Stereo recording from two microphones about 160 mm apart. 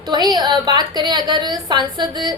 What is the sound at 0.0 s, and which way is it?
A woman's voice, 25° right (ahead or behind).